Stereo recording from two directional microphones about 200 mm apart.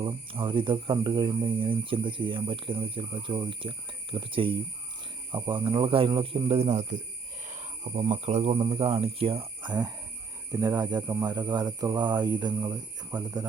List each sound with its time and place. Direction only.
0.0 s speech: 25° right (ahead or behind)